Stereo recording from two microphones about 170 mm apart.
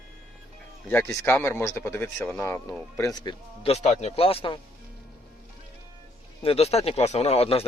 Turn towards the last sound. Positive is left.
turn(degrees=35)  # may be behind; listen again after turning